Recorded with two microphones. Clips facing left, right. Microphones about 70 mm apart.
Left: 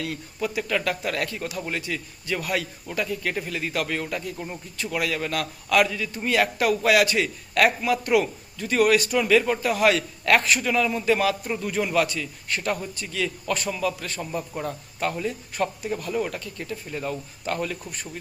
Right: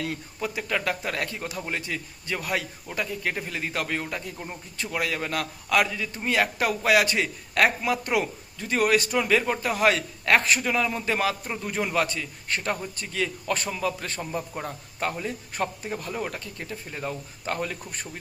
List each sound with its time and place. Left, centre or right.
0.0 s a man's voice: right